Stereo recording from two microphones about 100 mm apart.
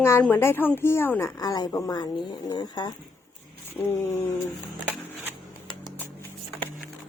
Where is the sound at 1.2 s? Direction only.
35° left (ahead or behind).